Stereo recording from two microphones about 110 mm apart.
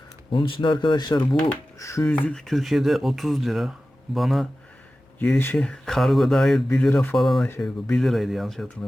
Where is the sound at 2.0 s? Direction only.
10° left (ahead or behind).